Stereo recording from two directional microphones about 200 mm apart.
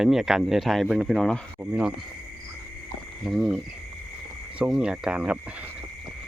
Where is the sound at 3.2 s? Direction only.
Centre (ahead or behind).